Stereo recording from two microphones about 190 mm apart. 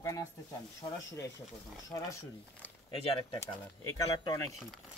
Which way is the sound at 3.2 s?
20° left (ahead or behind).